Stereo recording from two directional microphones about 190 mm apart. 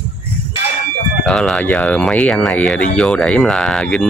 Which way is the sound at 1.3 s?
5° left (ahead or behind).